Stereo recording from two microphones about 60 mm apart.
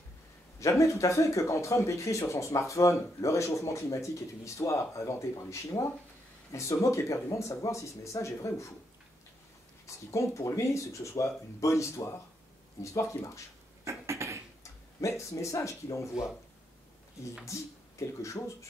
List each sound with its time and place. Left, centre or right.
0.6 s speech: left
9.8 s speech: left
13.8 s a sound: right
14.6 s speech: left
17.5 s speech: left